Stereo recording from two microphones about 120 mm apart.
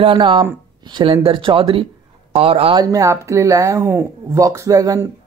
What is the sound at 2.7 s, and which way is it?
Speech, 30° right (ahead or behind).